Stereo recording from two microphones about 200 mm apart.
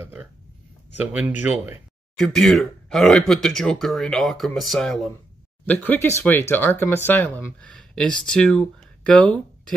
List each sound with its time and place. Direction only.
0.0 s a sound: 10° right (ahead or behind)
1.1 s speech: 10° right (ahead or behind)
2.1 s speech: centre (ahead or behind)